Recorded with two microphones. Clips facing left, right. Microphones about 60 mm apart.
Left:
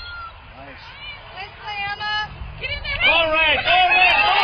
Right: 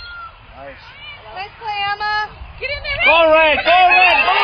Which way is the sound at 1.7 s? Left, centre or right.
Right.